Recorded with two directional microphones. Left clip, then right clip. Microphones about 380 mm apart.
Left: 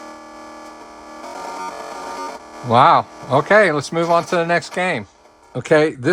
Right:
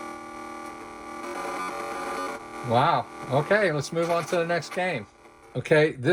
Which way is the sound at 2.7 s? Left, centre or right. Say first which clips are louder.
Left 10 dB; centre.